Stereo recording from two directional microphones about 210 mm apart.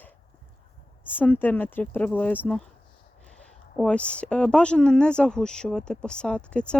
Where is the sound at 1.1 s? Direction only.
10° left (ahead or behind).